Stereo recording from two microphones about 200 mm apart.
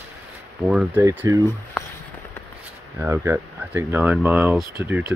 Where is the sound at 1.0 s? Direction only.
15° right (ahead or behind).